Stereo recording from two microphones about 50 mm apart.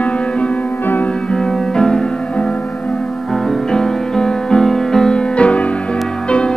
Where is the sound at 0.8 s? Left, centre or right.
Left.